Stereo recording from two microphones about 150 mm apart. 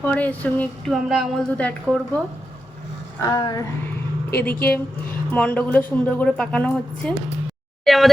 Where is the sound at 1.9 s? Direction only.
10° left (ahead or behind).